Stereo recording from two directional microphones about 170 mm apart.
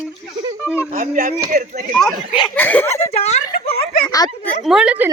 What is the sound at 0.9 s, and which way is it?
Speech, 55° right (ahead or behind).